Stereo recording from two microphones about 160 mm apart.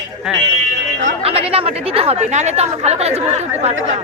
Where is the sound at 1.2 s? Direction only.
35° right (ahead or behind).